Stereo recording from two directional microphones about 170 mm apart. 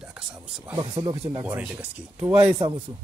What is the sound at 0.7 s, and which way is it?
Speech, 20° right (ahead or behind).